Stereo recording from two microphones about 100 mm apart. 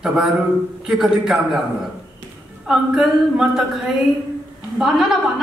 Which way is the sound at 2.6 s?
5° right (ahead or behind).